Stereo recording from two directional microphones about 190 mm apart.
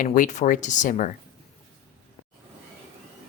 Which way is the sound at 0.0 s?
45° left (ahead or behind).